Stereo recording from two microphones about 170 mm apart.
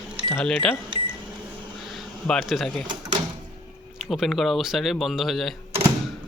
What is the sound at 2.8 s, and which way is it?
Speech, 25° right (ahead or behind).